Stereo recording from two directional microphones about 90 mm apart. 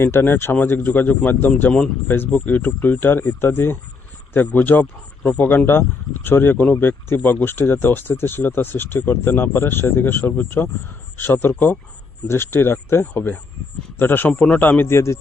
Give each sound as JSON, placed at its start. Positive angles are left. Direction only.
{"t": 0.0, "sound": "speech", "side_deg": 25}